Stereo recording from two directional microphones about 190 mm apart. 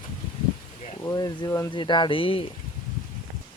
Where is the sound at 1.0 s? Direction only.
20° left (ahead or behind).